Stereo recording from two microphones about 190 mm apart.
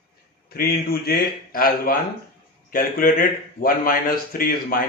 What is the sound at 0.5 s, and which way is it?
Speech, 50° left (ahead or behind).